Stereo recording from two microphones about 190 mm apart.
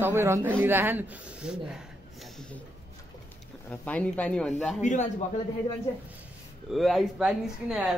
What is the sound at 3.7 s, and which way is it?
Speech, 5° left (ahead or behind).